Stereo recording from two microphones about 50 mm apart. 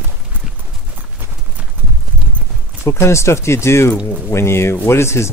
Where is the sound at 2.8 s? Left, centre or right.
Left.